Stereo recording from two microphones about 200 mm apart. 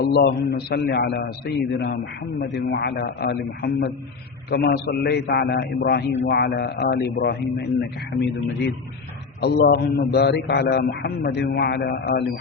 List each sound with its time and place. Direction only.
0.0 s a man's voice: 55° left (ahead or behind)